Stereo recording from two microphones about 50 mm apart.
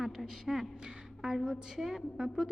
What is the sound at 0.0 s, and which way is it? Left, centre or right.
A woman's voice, centre.